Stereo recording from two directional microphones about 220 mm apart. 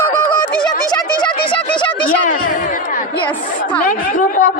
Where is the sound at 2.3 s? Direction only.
35° left (ahead or behind).